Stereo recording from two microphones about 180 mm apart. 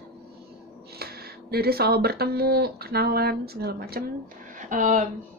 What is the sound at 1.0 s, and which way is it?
Speech, 60° right (ahead or behind).